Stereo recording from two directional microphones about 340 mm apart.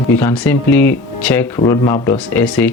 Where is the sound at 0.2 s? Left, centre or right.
Centre.